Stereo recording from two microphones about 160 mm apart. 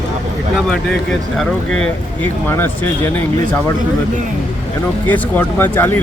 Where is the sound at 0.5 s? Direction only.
5° left (ahead or behind).